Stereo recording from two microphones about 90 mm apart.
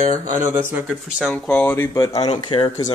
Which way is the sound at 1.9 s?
40° left (ahead or behind).